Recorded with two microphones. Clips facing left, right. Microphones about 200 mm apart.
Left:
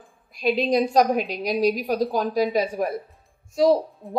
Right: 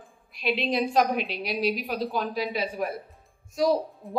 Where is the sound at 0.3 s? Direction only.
40° left (ahead or behind).